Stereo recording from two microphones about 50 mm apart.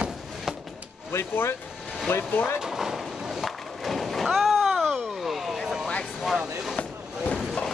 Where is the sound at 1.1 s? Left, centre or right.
Left.